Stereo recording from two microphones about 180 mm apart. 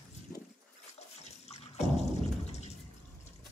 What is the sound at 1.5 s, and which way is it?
Drip, 35° left (ahead or behind).